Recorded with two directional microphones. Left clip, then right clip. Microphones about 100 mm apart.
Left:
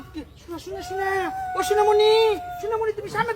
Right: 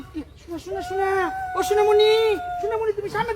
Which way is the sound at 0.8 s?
40° left (ahead or behind).